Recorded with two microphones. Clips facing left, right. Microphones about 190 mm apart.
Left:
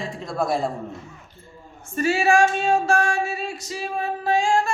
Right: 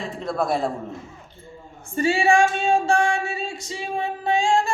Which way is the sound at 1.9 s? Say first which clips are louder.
Even; 30° right (ahead or behind).